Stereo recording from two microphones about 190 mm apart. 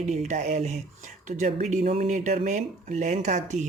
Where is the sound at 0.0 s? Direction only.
40° right (ahead or behind).